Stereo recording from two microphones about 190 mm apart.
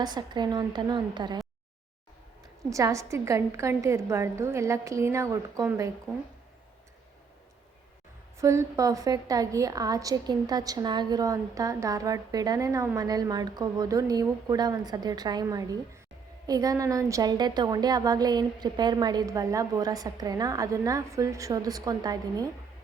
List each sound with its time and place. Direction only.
0.0 s a woman's voice: 20° right (ahead or behind)
2.6 s a woman's voice: 15° right (ahead or behind)
8.4 s a woman's voice: 15° right (ahead or behind)